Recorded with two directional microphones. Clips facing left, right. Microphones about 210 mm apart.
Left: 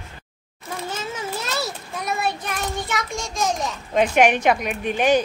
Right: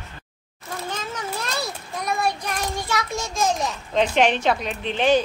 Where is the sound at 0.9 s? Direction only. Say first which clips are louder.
Left 1 dB; 5° left (ahead or behind).